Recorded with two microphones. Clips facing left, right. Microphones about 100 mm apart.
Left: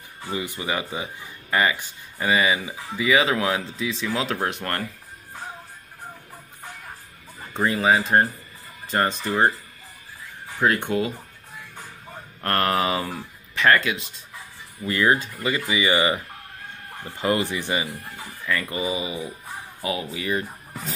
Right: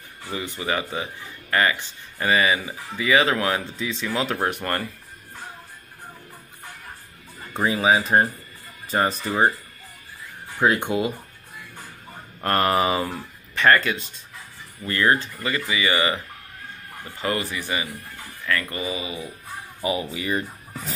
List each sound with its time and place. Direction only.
0.2 s speech: 15° left (ahead or behind); by 4.8 s 5° right (ahead or behind)
7.5 s speech: 5° right (ahead or behind)
10.6 s speech: 15° right (ahead or behind)
12.4 s speech: 10° right (ahead or behind)
14.8 s speech: 10° left (ahead or behind)
17.2 s speech: 20° left (ahead or behind)
20.0 s speech: centre (ahead or behind)